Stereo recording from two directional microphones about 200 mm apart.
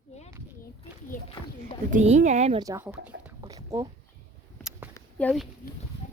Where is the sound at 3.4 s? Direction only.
20° right (ahead or behind).